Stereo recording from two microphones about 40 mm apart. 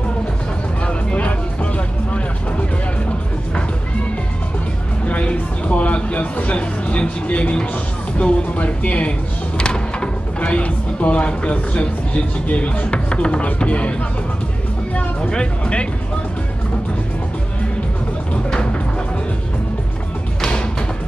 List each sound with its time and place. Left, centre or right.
0.8 s music: left
5.0 s a sound: left
8.2 s speech: left
15.0 s speech: left